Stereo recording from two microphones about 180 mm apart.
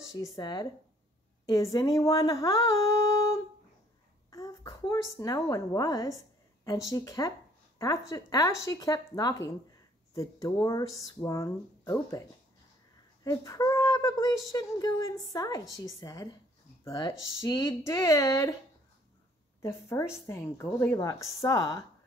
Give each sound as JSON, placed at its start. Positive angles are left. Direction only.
{"t": 0.2, "sound": "a woman's voice", "side_deg": 25}
{"t": 13.2, "sound": "a woman's voice", "side_deg": 20}
{"t": 19.6, "sound": "a woman's voice", "side_deg": 15}